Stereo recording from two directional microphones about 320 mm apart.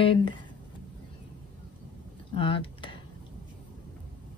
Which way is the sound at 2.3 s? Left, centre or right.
Centre.